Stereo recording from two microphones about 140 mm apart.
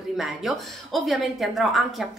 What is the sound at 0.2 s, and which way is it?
A woman's voice, centre (ahead or behind).